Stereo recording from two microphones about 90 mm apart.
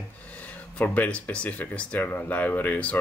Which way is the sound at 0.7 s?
15° left (ahead or behind).